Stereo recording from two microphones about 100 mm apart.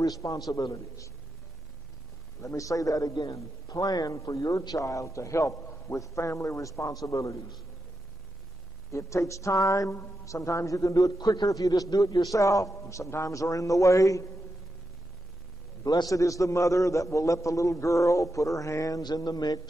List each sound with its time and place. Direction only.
0.0 s a woman's voice: 35° left (ahead or behind)
2.4 s a woman's voice: 35° left (ahead or behind)
3.1 s a man's voice: 45° left (ahead or behind)
8.9 s a woman's voice: 30° left (ahead or behind)
15.8 s a woman's voice: 40° left (ahead or behind)